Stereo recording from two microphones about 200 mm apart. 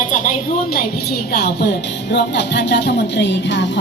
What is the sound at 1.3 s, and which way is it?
Speech, 55° left (ahead or behind).